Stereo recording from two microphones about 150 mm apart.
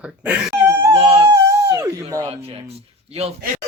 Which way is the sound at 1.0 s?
40° right (ahead or behind).